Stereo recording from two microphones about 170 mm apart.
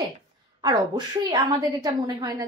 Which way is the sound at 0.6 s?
25° right (ahead or behind).